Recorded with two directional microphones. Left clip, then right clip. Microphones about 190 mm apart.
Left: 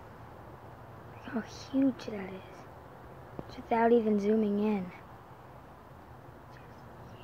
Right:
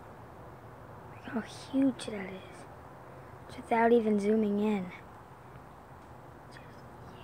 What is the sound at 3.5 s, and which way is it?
A woman's voice, centre (ahead or behind).